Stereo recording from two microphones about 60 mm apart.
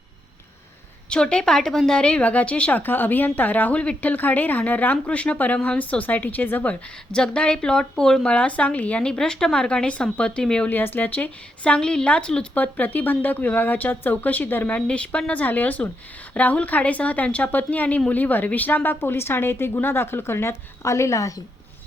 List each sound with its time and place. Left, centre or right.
1.1 s speech: centre; by 6.7 s left
7.1 s speech: centre
10.7 s speech: left; by 12.5 s centre
12.5 s speech: left
14.8 s a woman's voice: centre; by 21.4 s left